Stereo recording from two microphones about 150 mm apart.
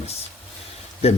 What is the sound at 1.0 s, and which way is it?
Speech, 45° left (ahead or behind).